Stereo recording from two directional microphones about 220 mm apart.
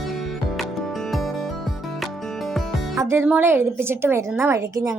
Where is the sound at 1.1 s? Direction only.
Centre (ahead or behind).